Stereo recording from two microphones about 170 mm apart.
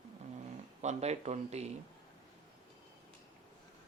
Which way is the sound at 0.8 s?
40° right (ahead or behind).